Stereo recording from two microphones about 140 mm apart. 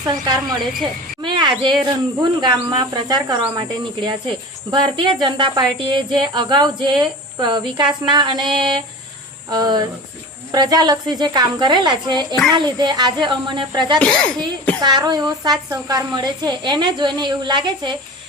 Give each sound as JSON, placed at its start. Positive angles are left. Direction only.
{"t": 0.1, "sound": "a woman's voice", "side_deg": -30}
{"t": 14.0, "sound": "a child's voice", "side_deg": 5}
{"t": 14.8, "sound": "speech", "side_deg": -30}